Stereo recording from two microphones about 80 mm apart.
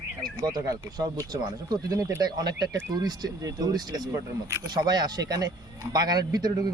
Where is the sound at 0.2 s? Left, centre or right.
Right.